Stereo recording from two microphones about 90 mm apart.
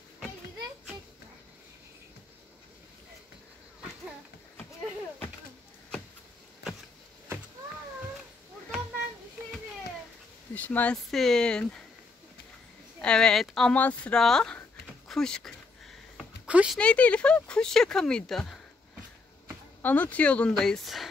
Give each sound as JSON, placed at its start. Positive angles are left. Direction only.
{"t": 10.5, "sound": "a sound", "side_deg": 20}
{"t": 11.1, "sound": "speech", "side_deg": 5}
{"t": 13.0, "sound": "speech", "side_deg": 10}
{"t": 13.7, "sound": "speech", "side_deg": 20}
{"t": 14.1, "sound": "speech", "side_deg": 5}
{"t": 16.2, "sound": "a sound", "side_deg": -10}
{"t": 16.7, "sound": "speech", "side_deg": 15}
{"t": 19.8, "sound": "speech", "side_deg": 20}